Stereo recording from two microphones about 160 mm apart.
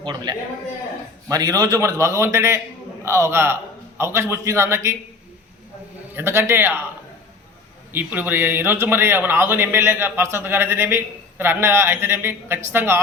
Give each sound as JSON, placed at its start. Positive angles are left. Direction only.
{"t": 0.0, "sound": "a man's voice", "side_deg": -25}
{"t": 6.1, "sound": "speech", "side_deg": -15}
{"t": 7.9, "sound": "speech", "side_deg": -10}